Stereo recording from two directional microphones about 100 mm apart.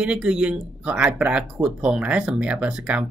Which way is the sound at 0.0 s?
10° right (ahead or behind).